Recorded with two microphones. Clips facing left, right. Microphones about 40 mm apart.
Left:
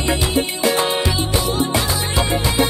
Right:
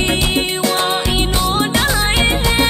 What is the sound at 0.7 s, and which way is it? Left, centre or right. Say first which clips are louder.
Music: right 2 dB; right.